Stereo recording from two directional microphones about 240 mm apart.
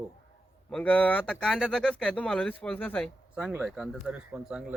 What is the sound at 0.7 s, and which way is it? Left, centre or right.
Speech, centre.